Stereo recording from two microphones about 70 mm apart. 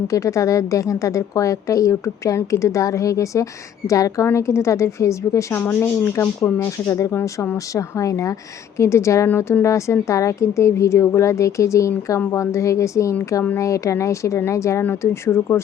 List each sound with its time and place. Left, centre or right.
0.1 s a woman's voice: left
4.3 s a woman's voice: left
5.5 s speech: left
6.4 s a woman's voice: left